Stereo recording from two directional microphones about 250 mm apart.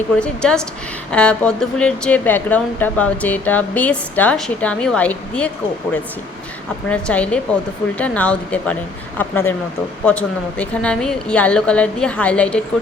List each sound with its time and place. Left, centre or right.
0.2 s a woman's voice: centre
6.8 s a woman's voice: centre